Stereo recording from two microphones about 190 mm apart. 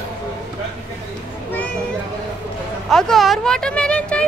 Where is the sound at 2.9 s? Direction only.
Centre (ahead or behind).